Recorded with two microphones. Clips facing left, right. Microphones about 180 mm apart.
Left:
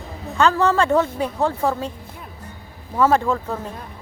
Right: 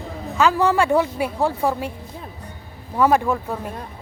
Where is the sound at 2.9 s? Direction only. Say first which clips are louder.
Even; 15° right (ahead or behind).